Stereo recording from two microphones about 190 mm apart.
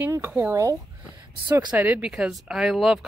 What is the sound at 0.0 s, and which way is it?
Speech, 10° right (ahead or behind).